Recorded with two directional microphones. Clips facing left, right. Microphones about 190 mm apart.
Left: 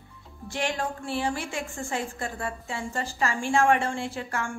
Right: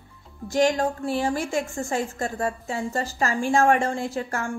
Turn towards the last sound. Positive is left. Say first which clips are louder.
# right 4 dB
turn(degrees=-40)  # may be behind; listen again after turning